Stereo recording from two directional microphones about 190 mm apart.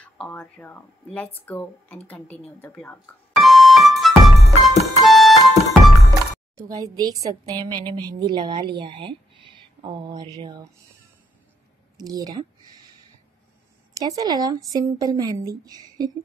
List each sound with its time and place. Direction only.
0.0 s speech: 5° left (ahead or behind)
2.0 s music: 5° left (ahead or behind)
6.5 s speech: 20° right (ahead or behind)
12.0 s speech: 20° right (ahead or behind)
13.9 s speech: 20° right (ahead or behind)